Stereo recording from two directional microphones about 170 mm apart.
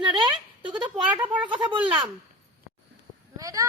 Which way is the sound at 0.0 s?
25° right (ahead or behind).